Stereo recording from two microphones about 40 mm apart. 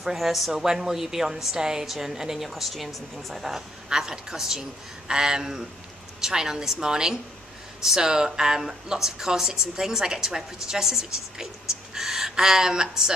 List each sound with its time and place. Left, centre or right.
0.0 s speech: centre
2.5 s speech: centre
3.9 s speech: centre